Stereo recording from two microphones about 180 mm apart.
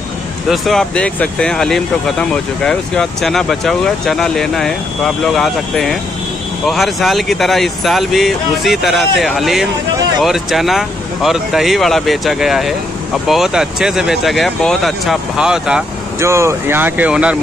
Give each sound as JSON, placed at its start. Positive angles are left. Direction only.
{"t": 0.5, "sound": "speech", "side_deg": 0}
{"t": 16.2, "sound": "speech", "side_deg": -15}